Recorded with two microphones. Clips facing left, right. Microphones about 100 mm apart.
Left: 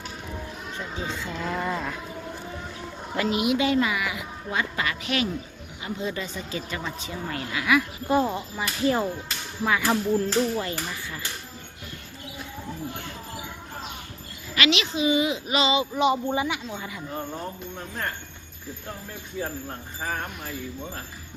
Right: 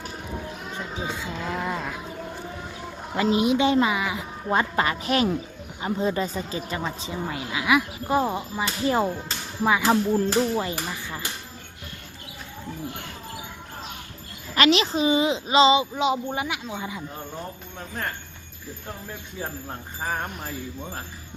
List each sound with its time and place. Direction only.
0.7 s a sound: 15° right (ahead or behind)
1.4 s a sound: centre (ahead or behind)
3.2 s speech: 30° right (ahead or behind)
4.4 s speech: 40° right (ahead or behind)
7.3 s speech: 15° right (ahead or behind)
9.3 s music: 30° right (ahead or behind)
9.6 s speech: 20° right (ahead or behind)
14.5 s speech: 40° right (ahead or behind)
16.1 s speech: 10° right (ahead or behind)